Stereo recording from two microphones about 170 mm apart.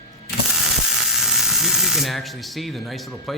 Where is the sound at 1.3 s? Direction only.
Centre (ahead or behind).